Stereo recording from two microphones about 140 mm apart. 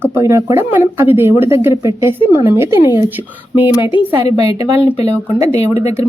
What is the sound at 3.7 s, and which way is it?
Speech, 35° left (ahead or behind).